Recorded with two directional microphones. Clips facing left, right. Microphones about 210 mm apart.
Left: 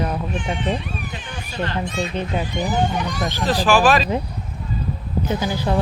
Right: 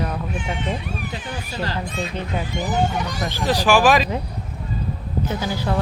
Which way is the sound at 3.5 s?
15° right (ahead or behind).